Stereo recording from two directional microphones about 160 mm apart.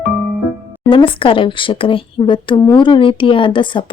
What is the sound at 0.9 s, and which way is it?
Speech, 35° left (ahead or behind).